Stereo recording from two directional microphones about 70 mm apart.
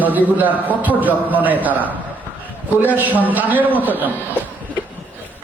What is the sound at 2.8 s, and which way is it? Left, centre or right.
A man's voice, right.